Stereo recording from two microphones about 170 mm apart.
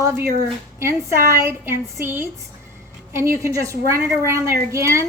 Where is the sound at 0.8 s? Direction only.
15° right (ahead or behind).